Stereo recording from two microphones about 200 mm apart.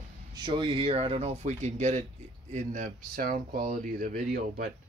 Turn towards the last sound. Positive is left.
turn(degrees=-45)  # may be behind; listen again after turning